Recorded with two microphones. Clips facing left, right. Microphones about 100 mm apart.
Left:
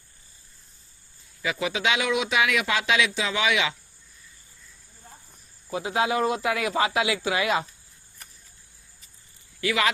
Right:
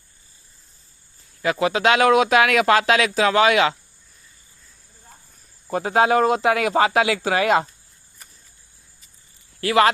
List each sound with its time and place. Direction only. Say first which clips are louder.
1.4 s speech: right 7 dB; 45° right (ahead or behind)
5.7 s speech: right 7 dB; 50° right (ahead or behind)
9.6 s speech: right 8 dB; 40° right (ahead or behind)